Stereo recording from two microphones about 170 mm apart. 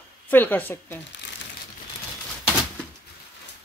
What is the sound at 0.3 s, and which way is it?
Speech, 10° left (ahead or behind).